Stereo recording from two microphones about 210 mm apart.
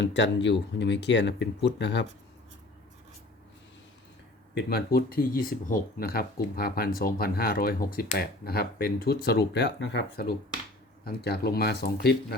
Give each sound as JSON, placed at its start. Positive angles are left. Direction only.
{"t": 0.0, "sound": "speech", "side_deg": 60}
{"t": 4.5, "sound": "speech", "side_deg": 50}